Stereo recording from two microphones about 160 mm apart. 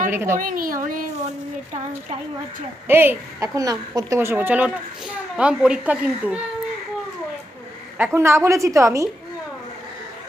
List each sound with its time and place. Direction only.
0.1 s a woman's voice: 15° right (ahead or behind)
0.3 s a woman's voice: 60° right (ahead or behind)
2.8 s a woman's voice: 15° right (ahead or behind)
7.9 s a woman's voice: 15° right (ahead or behind)